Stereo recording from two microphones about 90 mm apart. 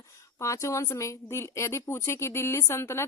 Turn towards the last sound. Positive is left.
turn(degrees=30)  # may be behind; listen again after turning